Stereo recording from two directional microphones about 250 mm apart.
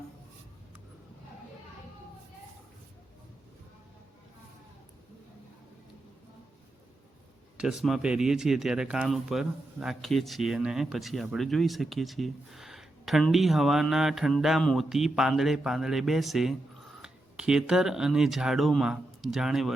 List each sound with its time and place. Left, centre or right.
7.5 s speech: centre